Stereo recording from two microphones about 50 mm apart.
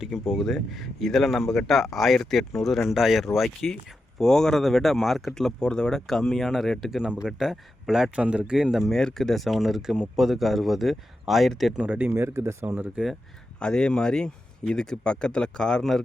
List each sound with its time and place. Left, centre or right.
0.0 s speech: centre
7.0 s speech: centre
7.3 s speech: centre
8.1 s speech: right
8.9 s speech: centre
11.9 s speech: right
12.1 s speech: right
12.6 s speech: right
13.6 s speech: centre